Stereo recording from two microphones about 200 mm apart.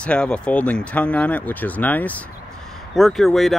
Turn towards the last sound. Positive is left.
turn(degrees=0)  # may be behind; listen again after turning